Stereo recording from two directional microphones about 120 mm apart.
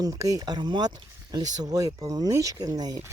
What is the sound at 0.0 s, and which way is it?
Speech, 30° right (ahead or behind).